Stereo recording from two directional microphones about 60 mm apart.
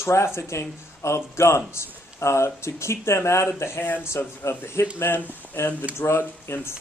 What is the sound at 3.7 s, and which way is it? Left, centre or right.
Speech, left.